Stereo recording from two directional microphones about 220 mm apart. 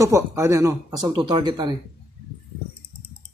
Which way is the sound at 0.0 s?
15° right (ahead or behind).